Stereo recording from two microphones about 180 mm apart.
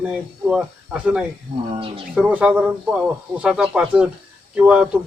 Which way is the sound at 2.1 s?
5° right (ahead or behind).